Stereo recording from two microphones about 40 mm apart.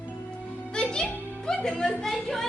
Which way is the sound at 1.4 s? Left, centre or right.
Centre.